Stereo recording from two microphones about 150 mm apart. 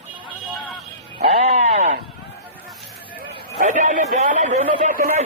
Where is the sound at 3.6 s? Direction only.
55° right (ahead or behind).